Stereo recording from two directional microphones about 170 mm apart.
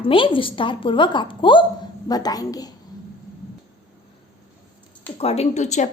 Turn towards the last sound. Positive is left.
turn(degrees=45)  # may be behind; listen again after turning